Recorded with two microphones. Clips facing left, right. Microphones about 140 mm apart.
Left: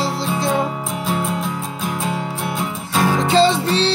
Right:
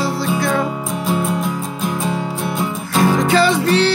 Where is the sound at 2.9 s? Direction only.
Centre (ahead or behind).